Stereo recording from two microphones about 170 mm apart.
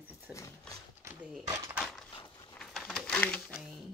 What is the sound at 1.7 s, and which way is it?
Dog, centre (ahead or behind).